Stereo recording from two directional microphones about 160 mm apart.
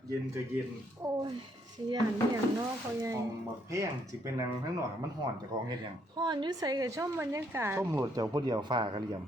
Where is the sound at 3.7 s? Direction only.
20° right (ahead or behind).